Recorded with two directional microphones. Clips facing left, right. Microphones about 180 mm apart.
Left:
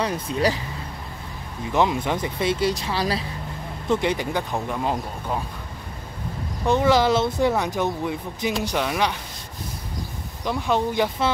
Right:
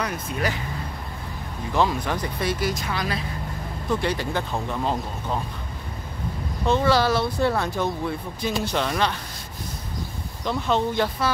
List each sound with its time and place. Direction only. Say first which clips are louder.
0.0 s speech: left 4 dB; 30° left (ahead or behind)
1.7 s speech: left 2 dB; 20° left (ahead or behind)
3.9 s speech: left 2 dB; 20° left (ahead or behind)
6.6 s speech: left 2 dB; 15° left (ahead or behind)
10.4 s speech: even; 10° left (ahead or behind)